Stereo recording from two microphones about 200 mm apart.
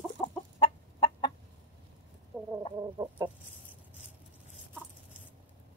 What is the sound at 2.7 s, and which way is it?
Chicken, 20° right (ahead or behind).